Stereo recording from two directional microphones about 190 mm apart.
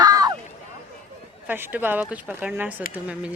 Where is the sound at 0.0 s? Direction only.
20° right (ahead or behind).